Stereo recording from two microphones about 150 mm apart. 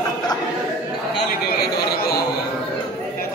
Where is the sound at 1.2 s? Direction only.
90° left.